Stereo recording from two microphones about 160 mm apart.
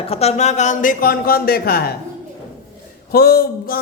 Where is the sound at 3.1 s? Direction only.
70° left (ahead or behind).